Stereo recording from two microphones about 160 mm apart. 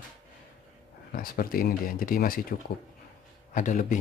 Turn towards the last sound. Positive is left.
turn(degrees=55)  # may be behind; listen again after turning